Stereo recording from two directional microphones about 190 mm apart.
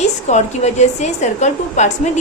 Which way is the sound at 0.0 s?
35° left (ahead or behind).